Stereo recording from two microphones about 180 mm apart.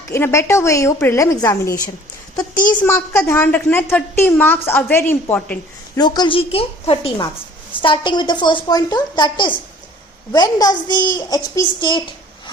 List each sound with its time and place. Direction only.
0.1 s a woman's voice: 15° left (ahead or behind)
3.1 s a woman's voice: 10° left (ahead or behind)
6.0 s a woman's voice: 25° left (ahead or behind)